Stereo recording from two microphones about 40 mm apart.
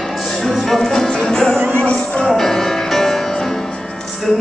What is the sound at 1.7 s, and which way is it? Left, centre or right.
Music, left.